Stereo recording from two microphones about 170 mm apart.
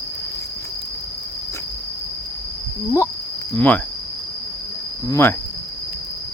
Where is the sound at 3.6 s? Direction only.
10° left (ahead or behind).